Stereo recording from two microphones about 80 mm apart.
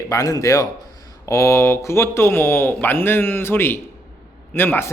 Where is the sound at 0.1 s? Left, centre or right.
Left.